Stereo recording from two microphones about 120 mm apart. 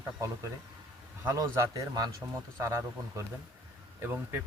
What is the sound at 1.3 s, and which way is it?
Speech, 25° right (ahead or behind).